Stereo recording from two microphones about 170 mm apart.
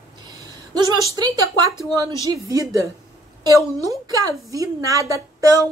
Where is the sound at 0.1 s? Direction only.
25° right (ahead or behind).